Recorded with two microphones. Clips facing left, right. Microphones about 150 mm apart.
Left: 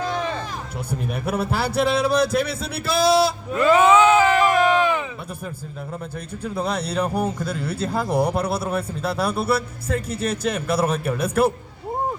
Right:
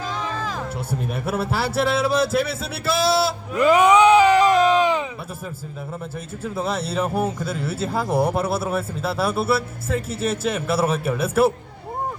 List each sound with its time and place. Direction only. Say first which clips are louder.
0.9 s speech: left 2 dB; 5° right (ahead or behind)
3.5 s a sound: right 1 dB; 15° right (ahead or behind)
6.4 s speech: even; 5° right (ahead or behind)